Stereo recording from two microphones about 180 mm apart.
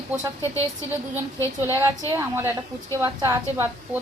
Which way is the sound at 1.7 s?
15° right (ahead or behind).